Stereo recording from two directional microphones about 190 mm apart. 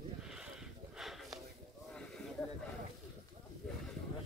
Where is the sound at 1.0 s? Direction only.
Centre (ahead or behind).